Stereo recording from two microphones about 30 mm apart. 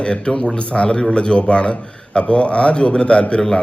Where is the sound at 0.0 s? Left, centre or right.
Left.